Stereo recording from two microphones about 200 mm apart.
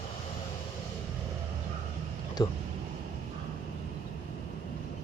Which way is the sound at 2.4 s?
20° left (ahead or behind).